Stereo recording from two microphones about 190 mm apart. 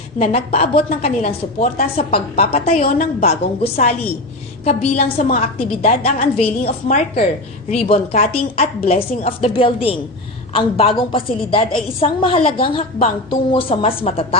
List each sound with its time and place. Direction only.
0.2 s a woman's voice: 35° left (ahead or behind)
7.7 s a woman's voice: 30° left (ahead or behind)